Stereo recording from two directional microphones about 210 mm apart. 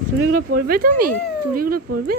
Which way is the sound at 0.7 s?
45° right (ahead or behind).